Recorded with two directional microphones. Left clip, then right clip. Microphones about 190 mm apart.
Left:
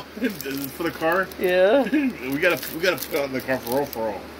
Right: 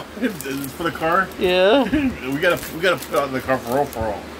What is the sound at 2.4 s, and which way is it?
Speech, 15° right (ahead or behind).